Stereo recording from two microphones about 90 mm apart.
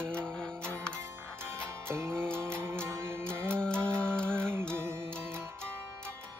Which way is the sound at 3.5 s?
10° left (ahead or behind).